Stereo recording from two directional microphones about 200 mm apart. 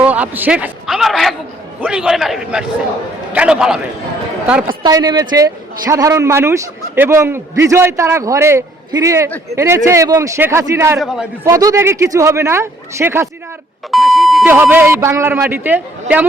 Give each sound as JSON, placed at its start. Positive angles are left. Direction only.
{"t": 0.0, "sound": "a man's voice", "side_deg": -5}
{"t": 4.7, "sound": "a man's voice", "side_deg": -20}
{"t": 11.0, "sound": "a man's voice", "side_deg": 0}
{"t": 11.4, "sound": "a man's voice", "side_deg": -15}
{"t": 13.9, "sound": "beep", "side_deg": 0}
{"t": 14.5, "sound": "a man's voice", "side_deg": -10}